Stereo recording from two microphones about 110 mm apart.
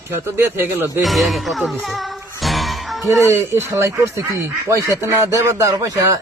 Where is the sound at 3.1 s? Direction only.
30° right (ahead or behind).